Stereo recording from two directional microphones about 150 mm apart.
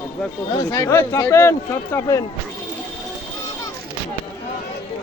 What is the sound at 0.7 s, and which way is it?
A man's voice, 20° left (ahead or behind).